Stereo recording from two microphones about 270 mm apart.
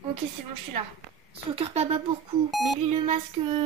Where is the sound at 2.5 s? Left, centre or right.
Centre.